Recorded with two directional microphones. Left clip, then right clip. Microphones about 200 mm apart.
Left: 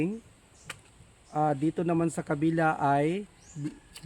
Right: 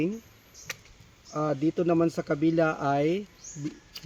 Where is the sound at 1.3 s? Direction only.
30° left (ahead or behind).